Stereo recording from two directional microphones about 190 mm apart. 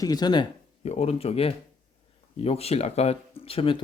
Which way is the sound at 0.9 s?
35° left (ahead or behind).